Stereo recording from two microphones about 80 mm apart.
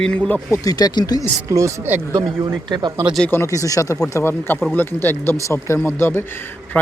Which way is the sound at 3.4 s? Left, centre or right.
Left.